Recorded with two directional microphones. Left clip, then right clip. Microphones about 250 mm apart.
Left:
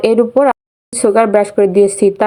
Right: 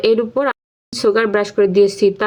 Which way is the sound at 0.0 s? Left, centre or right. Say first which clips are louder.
Left 5 dB; centre.